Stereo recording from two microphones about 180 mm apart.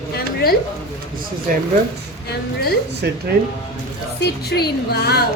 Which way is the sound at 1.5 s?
50° right (ahead or behind).